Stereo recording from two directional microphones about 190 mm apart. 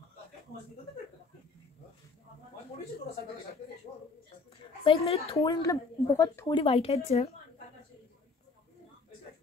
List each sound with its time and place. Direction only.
4.8 s speech: 30° left (ahead or behind)
5.4 s speech: 15° left (ahead or behind)
6.6 s speech: 30° left (ahead or behind)